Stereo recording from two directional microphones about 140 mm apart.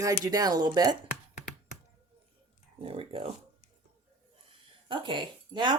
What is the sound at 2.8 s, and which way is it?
Speech, 40° right (ahead or behind).